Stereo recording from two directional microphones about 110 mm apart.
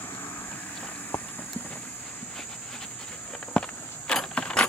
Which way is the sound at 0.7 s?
15° left (ahead or behind).